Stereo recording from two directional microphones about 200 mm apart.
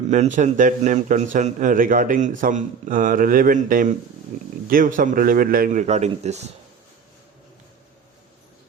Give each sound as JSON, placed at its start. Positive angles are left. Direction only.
{"t": 0.1, "sound": "a man's voice", "side_deg": -35}